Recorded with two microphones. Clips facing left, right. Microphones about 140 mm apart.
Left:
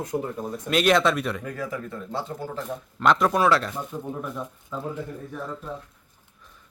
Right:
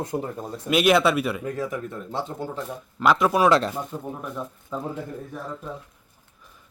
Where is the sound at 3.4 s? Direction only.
20° right (ahead or behind).